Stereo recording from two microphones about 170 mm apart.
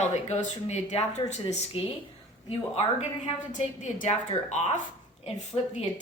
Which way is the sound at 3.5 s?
45° left (ahead or behind).